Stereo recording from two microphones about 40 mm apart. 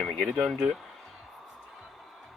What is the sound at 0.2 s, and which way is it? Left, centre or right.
Speech, right.